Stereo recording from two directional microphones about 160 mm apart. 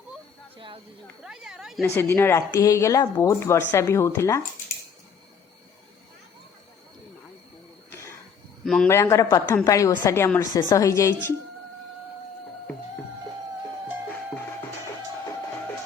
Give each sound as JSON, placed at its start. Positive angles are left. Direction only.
{"t": 1.2, "sound": "speech", "side_deg": -5}
{"t": 2.0, "sound": "speech", "side_deg": 15}
{"t": 8.6, "sound": "a man's voice", "side_deg": 0}
{"t": 8.9, "sound": "a woman's voice", "side_deg": 15}